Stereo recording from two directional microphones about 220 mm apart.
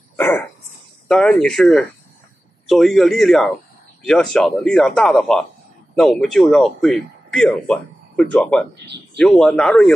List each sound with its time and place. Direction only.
0.1 s a sound: 10° left (ahead or behind)
1.0 s a man's voice: 5° left (ahead or behind)
8.8 s speech: 50° right (ahead or behind)
9.2 s a man's voice: centre (ahead or behind)